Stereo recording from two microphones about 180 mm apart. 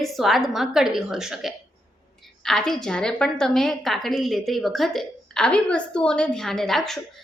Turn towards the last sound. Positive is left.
turn(degrees=0)  # may be behind; listen again after turning